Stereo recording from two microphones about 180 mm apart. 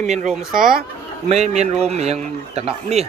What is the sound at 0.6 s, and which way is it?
Speech, 50° right (ahead or behind).